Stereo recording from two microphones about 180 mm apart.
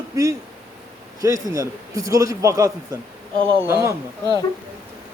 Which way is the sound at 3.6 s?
15° right (ahead or behind).